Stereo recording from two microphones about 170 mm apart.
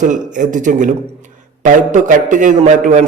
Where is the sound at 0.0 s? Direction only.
50° right (ahead or behind).